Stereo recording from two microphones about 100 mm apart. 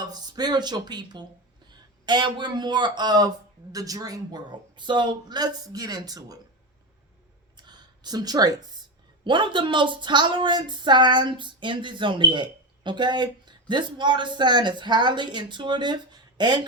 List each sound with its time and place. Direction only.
0.0 s speech: 40° right (ahead or behind)
7.5 s a sound: 45° right (ahead or behind)
9.2 s speech: 50° right (ahead or behind)